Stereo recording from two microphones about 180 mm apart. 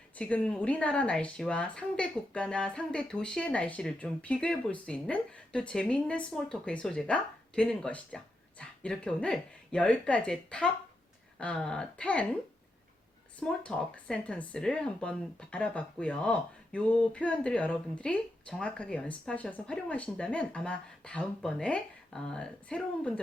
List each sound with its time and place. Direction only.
0.2 s speech: 5° left (ahead or behind)
13.4 s speech: 5° left (ahead or behind)